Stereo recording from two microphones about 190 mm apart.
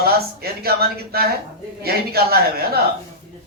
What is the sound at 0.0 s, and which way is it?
A man's voice, 55° right (ahead or behind).